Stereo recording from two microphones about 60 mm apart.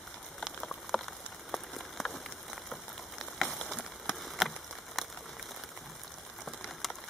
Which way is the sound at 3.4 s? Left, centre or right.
Centre.